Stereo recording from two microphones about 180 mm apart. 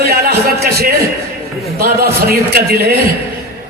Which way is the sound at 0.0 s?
60° right (ahead or behind).